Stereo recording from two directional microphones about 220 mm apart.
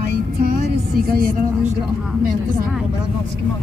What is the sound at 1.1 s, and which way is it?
Speech, 40° right (ahead or behind).